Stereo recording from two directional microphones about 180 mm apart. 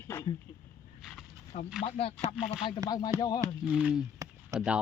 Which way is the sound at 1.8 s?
30° left (ahead or behind).